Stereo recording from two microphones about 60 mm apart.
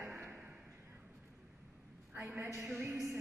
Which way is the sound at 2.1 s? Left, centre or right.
Right.